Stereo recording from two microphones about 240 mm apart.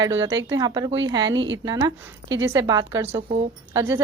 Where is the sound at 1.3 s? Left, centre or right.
Right.